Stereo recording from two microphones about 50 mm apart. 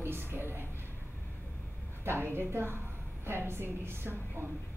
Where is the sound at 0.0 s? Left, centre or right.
Right.